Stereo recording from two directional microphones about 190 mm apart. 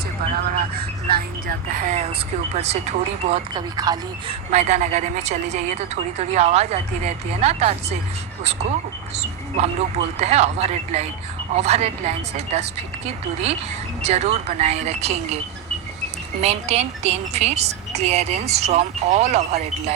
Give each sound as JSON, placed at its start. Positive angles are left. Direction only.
{"t": 0.5, "sound": "a woman's voice", "side_deg": -55}
{"t": 3.5, "sound": "speech", "side_deg": -20}
{"t": 4.5, "sound": "a woman's voice", "side_deg": -35}
{"t": 9.1, "sound": "a woman's voice", "side_deg": -35}
{"t": 16.4, "sound": "a woman's voice", "side_deg": -35}